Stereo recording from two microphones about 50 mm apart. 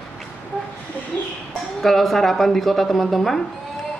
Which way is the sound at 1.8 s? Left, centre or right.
Centre.